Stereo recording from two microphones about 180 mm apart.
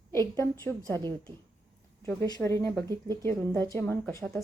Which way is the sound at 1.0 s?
25° right (ahead or behind).